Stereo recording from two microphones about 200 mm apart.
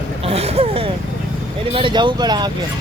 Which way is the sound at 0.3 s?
30° right (ahead or behind).